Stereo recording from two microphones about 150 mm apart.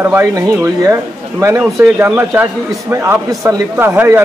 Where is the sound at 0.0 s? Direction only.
15° right (ahead or behind).